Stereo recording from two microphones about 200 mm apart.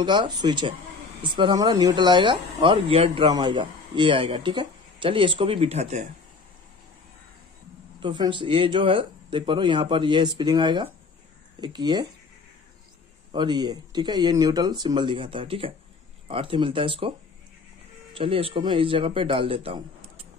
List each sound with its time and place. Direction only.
0.0 s speech: 25° right (ahead or behind)
8.0 s speech: 25° right (ahead or behind)
13.3 s speech: 20° right (ahead or behind)
18.1 s speech: 25° right (ahead or behind)